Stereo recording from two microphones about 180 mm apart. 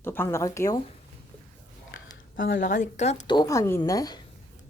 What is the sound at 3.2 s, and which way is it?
Speech, 25° left (ahead or behind).